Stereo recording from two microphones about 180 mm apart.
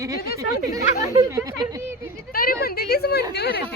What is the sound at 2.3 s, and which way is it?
A woman's voice, 55° left (ahead or behind).